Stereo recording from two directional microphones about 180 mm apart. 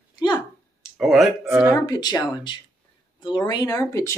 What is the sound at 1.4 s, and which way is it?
Speech, 10° right (ahead or behind).